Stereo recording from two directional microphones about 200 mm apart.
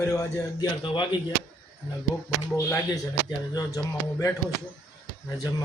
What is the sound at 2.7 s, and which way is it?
Speech, 15° left (ahead or behind).